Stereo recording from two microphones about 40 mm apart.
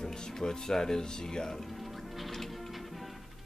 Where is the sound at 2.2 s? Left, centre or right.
Centre.